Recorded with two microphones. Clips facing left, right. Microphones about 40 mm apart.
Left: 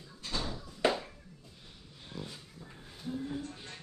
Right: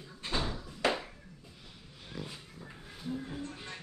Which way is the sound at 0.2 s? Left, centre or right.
Right.